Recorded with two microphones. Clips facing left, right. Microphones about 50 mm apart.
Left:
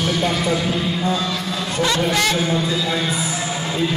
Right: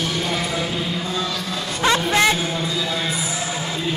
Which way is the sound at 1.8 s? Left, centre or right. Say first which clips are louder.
Right 3 dB; right.